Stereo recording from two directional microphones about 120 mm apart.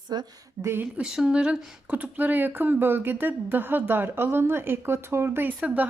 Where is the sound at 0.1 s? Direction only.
35° right (ahead or behind).